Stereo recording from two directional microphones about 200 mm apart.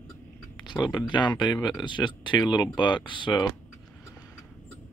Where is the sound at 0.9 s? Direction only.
25° left (ahead or behind).